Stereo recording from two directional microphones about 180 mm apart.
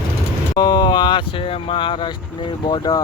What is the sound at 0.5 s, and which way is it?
Speech, 25° left (ahead or behind).